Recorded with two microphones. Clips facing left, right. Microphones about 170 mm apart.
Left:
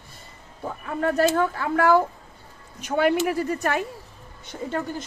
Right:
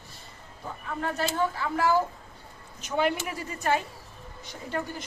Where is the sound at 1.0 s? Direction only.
55° left (ahead or behind).